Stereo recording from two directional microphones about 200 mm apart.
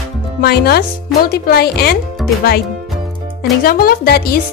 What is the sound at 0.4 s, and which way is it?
Speech, 50° left (ahead or behind).